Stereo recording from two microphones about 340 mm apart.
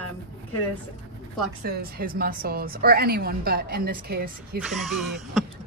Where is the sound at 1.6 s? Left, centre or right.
Right.